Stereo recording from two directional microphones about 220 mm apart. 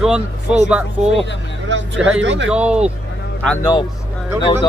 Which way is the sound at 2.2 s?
55° right (ahead or behind).